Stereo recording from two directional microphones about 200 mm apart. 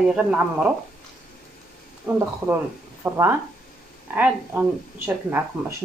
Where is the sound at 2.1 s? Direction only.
10° right (ahead or behind).